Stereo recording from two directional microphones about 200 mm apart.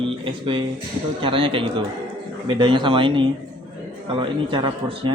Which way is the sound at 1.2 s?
25° right (ahead or behind).